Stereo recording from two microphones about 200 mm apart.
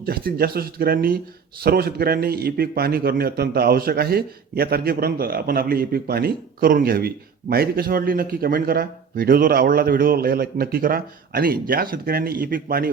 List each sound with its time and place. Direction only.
0.0 s a man's voice: 50° right (ahead or behind)